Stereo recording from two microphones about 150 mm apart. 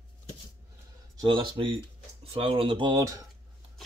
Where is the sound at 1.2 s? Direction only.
35° right (ahead or behind).